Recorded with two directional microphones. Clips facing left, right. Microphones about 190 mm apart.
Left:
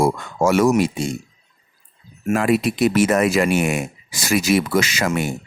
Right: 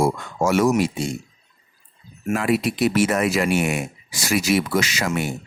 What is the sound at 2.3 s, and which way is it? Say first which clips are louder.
Speech: left 3 dB; 50° left (ahead or behind).